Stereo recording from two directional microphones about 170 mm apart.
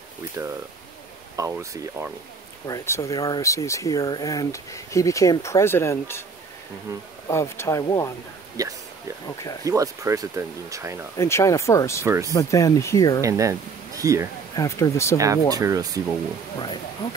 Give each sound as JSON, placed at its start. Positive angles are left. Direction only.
{"t": 0.4, "sound": "speech", "side_deg": -15}
{"t": 2.6, "sound": "speech", "side_deg": 20}
{"t": 7.2, "sound": "speech", "side_deg": 15}
{"t": 8.6, "sound": "speech", "side_deg": -20}
{"t": 11.1, "sound": "speech", "side_deg": 15}
{"t": 12.0, "sound": "speech", "side_deg": -15}
{"t": 12.3, "sound": "speech", "side_deg": 20}
{"t": 13.2, "sound": "speech", "side_deg": -20}
{"t": 14.5, "sound": "speech", "side_deg": 20}
{"t": 15.1, "sound": "speech", "side_deg": -20}